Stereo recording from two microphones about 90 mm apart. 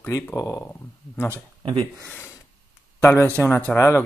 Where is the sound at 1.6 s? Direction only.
70° right (ahead or behind).